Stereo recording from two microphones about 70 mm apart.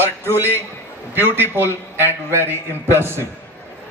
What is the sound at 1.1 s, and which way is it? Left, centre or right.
A man's voice, right.